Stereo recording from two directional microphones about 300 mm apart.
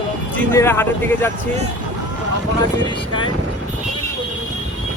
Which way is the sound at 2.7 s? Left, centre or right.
Centre.